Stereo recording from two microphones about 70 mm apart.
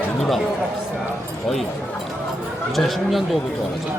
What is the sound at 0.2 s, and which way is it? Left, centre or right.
Speech, centre.